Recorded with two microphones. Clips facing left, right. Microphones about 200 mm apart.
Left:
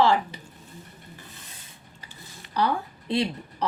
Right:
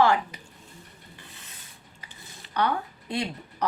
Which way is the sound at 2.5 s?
30° left (ahead or behind).